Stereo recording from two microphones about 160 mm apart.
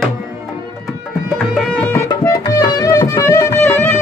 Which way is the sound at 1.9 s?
15° left (ahead or behind).